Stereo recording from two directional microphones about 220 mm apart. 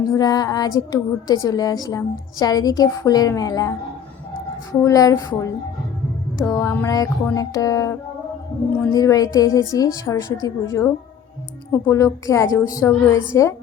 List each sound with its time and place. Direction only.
0.1 s speech: 15° left (ahead or behind)
4.7 s speech: 15° left (ahead or behind)